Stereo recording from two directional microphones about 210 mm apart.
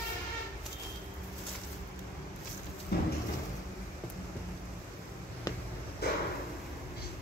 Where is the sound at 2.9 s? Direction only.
50° left (ahead or behind).